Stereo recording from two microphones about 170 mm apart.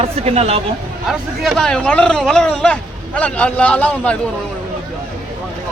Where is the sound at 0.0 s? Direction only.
35° right (ahead or behind).